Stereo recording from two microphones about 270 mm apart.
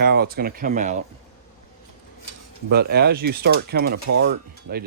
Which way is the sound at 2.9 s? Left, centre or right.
Right.